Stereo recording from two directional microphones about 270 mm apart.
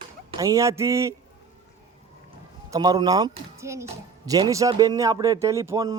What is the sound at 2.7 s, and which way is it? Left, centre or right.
A man's voice, centre.